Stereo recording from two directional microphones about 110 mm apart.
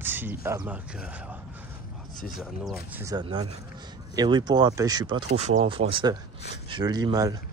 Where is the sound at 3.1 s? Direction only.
45° right (ahead or behind).